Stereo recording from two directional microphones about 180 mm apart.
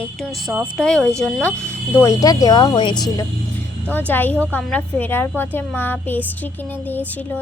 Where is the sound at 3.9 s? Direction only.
10° left (ahead or behind).